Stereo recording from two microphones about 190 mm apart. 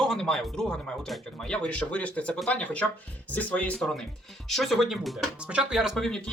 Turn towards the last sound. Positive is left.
turn(degrees=0)  # may be behind; listen again after turning